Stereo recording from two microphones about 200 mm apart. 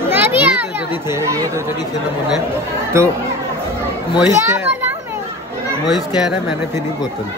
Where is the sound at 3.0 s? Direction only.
15° right (ahead or behind).